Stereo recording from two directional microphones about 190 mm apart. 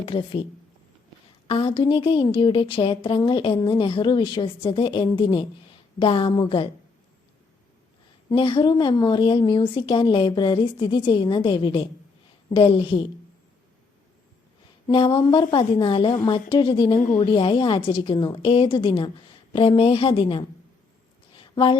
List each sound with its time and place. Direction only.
0.0 s a woman's voice: 25° left (ahead or behind)
1.5 s a woman's voice: 30° left (ahead or behind)
8.3 s a woman's voice: 25° left (ahead or behind)
14.8 s a woman's voice: 25° left (ahead or behind)
21.3 s a sound: 25° left (ahead or behind)